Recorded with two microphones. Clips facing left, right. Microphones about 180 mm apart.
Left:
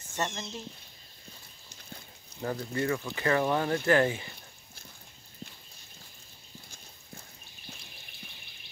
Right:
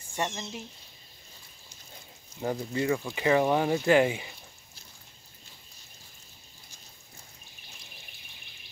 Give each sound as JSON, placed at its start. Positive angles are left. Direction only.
{"t": 0.1, "sound": "speech", "side_deg": -10}
{"t": 2.4, "sound": "speech", "side_deg": -15}